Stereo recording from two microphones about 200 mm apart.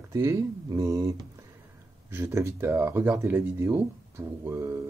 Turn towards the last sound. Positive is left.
turn(degrees=-15)  # may be behind; listen again after turning